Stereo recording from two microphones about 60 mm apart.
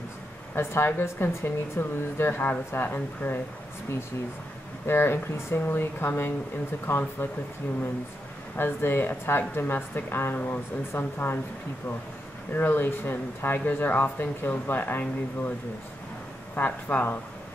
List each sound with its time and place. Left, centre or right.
0.6 s speech: left
4.8 s speech: left
8.5 s speech: left
12.5 s speech: left
16.5 s speech: left